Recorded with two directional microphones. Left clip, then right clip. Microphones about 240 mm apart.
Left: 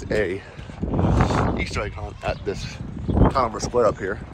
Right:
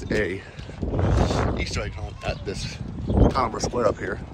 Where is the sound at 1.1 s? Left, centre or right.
Left.